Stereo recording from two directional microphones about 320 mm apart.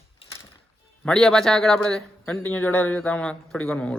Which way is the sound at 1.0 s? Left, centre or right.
Centre.